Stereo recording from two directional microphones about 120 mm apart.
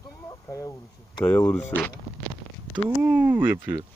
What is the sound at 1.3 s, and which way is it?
Speech, 10° left (ahead or behind).